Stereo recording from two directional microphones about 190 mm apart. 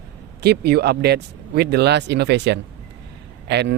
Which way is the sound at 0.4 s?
60° right (ahead or behind).